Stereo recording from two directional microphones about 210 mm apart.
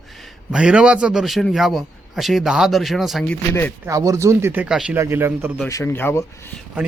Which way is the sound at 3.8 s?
15° right (ahead or behind).